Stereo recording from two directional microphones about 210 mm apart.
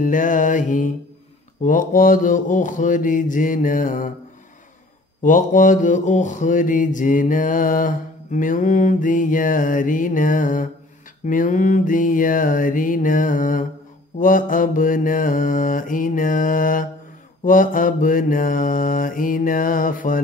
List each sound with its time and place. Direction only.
0.0 s mantra: 40° left (ahead or behind)
5.2 s mantra: 40° left (ahead or behind)